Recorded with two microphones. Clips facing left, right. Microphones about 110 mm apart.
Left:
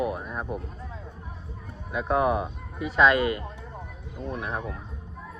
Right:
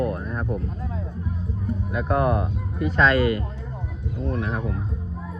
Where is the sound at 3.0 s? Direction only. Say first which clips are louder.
Right 1 dB; 20° left (ahead or behind).